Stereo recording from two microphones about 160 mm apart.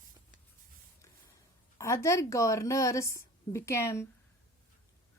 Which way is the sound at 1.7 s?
20° left (ahead or behind).